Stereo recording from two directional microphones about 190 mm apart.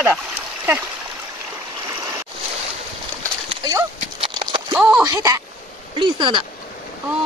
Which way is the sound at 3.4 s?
25° right (ahead or behind).